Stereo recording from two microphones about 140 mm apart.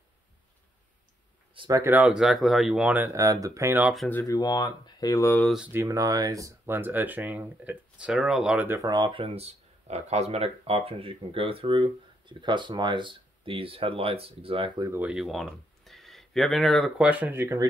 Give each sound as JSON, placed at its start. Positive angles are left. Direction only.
{"t": 1.7, "sound": "speech", "side_deg": -15}
{"t": 3.1, "sound": "speech", "side_deg": -25}
{"t": 4.1, "sound": "speech", "side_deg": 20}
{"t": 5.7, "sound": "speech", "side_deg": -20}
{"t": 8.8, "sound": "speech", "side_deg": -30}
{"t": 15.0, "sound": "speech", "side_deg": -5}
{"t": 17.0, "sound": "speech", "side_deg": -10}